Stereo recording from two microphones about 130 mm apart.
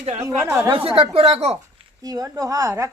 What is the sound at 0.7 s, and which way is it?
Speech, 45° right (ahead or behind).